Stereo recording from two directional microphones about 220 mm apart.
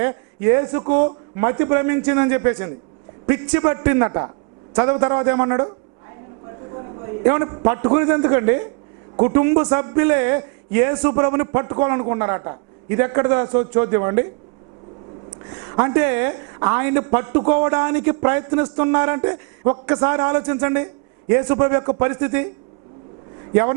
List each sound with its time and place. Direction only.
0.0 s a man's voice: 15° right (ahead or behind)
7.3 s a man's voice: 20° right (ahead or behind)
15.7 s a man's voice: 20° right (ahead or behind)